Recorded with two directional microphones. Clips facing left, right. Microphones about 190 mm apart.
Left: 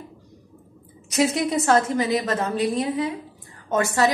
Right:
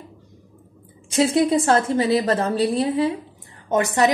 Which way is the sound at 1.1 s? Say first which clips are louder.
Right 4 dB; 30° right (ahead or behind).